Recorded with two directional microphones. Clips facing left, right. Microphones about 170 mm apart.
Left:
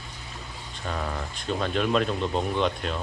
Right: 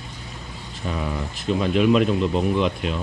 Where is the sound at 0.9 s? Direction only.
5° right (ahead or behind).